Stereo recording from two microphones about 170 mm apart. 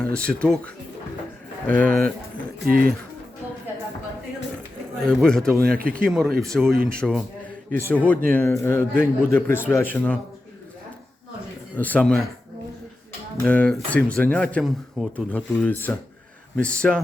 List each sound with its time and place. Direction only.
0.0 s speech: 5° left (ahead or behind)
1.6 s a man's voice: 10° left (ahead or behind)
2.6 s speech: 60° right (ahead or behind)
4.9 s speech: 5° left (ahead or behind)
5.5 s speech: 60° right (ahead or behind)
6.1 s speech: centre (ahead or behind)
7.7 s a man's voice: 10° left (ahead or behind)
11.8 s a man's voice: 10° left (ahead or behind)
13.4 s a man's voice: 5° left (ahead or behind)
15.3 s a man's voice: 10° left (ahead or behind)